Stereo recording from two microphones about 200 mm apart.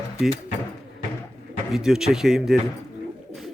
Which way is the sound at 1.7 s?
Centre (ahead or behind).